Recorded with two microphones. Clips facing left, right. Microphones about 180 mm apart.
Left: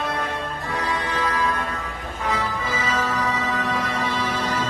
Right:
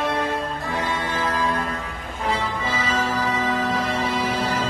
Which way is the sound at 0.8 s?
25° right (ahead or behind).